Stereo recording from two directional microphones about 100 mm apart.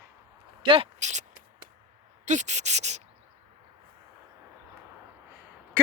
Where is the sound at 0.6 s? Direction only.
60° right (ahead or behind).